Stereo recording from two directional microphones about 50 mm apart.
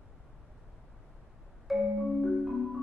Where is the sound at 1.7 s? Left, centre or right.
Centre.